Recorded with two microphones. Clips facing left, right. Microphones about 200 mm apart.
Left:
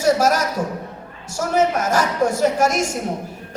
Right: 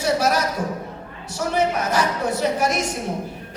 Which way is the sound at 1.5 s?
45° left (ahead or behind).